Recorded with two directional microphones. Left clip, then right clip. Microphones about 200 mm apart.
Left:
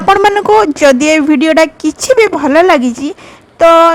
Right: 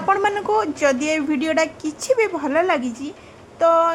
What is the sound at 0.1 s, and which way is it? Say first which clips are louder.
Speech: left 12 dB; 55° left (ahead or behind).